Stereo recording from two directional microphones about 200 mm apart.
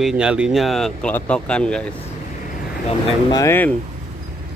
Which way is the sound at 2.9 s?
20° left (ahead or behind).